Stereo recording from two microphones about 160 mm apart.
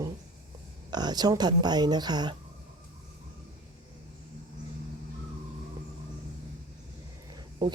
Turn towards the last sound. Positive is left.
turn(degrees=-30)  # may be behind; listen again after turning